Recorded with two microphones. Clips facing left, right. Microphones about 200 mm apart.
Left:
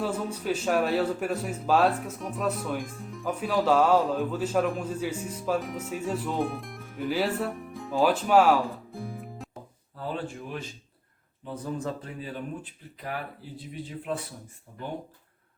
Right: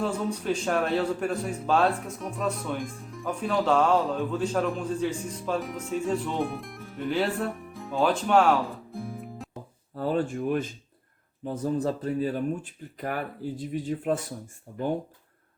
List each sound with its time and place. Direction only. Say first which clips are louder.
0.0 s a man's voice: right 2 dB; 5° left (ahead or behind)
9.9 s a man's voice: right 7 dB; 45° right (ahead or behind)